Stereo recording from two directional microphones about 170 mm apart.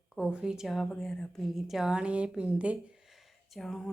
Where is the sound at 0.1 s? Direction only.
5° right (ahead or behind).